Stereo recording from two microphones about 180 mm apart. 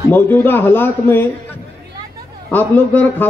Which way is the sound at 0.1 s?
10° left (ahead or behind).